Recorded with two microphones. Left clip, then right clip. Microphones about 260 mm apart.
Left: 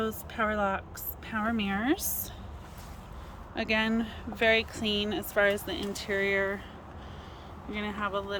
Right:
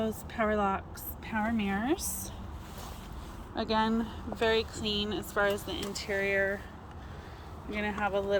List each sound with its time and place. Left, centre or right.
0.3 s speech: centre
3.5 s a woman's voice: left
4.4 s speech: centre
7.7 s speech: centre